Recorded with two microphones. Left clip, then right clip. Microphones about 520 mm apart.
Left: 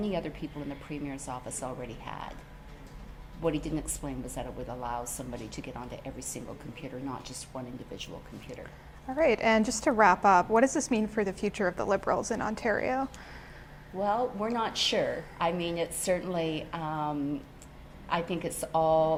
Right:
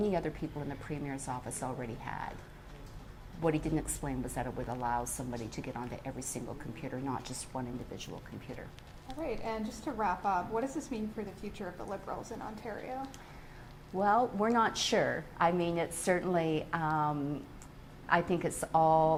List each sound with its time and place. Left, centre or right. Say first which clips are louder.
0.0 s speech: right 1 dB; centre
3.4 s speech: left 1 dB; centre
9.2 s a woman's voice: left 13 dB; left
14.0 s speech: right 1 dB; centre